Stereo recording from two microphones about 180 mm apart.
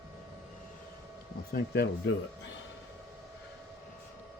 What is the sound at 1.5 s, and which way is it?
Speech, 65° left (ahead or behind).